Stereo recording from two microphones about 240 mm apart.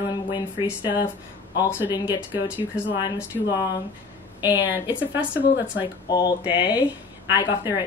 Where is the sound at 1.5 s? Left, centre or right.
Centre.